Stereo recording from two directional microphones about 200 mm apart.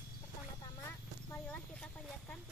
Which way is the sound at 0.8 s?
10° left (ahead or behind).